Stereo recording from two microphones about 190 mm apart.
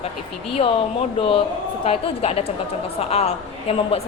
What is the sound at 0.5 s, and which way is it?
A woman's voice, 30° left (ahead or behind).